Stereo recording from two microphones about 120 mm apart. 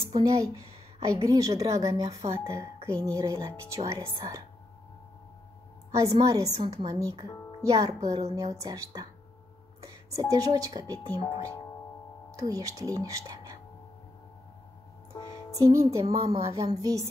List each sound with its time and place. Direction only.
0.1 s a woman's voice: 30° right (ahead or behind)
5.9 s a sound: 25° right (ahead or behind)
6.1 s a woman's voice: 30° right (ahead or behind)
12.4 s speech: 30° right (ahead or behind)
15.1 s music: 35° left (ahead or behind)
15.5 s speech: 25° right (ahead or behind)
16.0 s a woman's voice: 55° right (ahead or behind)
16.7 s speech: 30° right (ahead or behind)